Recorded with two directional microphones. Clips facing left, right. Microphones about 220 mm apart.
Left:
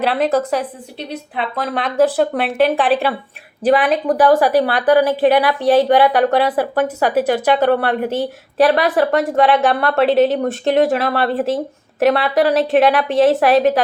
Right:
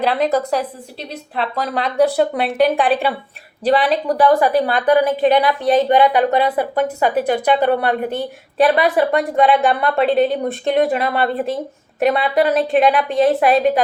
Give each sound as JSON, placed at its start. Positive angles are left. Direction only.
{"t": 0.0, "sound": "a woman's voice", "side_deg": 5}